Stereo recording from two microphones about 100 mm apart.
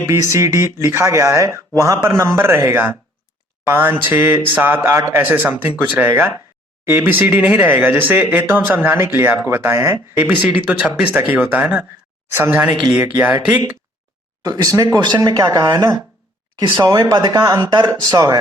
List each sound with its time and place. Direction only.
0.1 s speech: 30° right (ahead or behind)
14.4 s speech: 40° right (ahead or behind)